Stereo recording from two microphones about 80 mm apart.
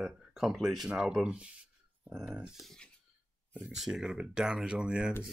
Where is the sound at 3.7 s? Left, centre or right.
Centre.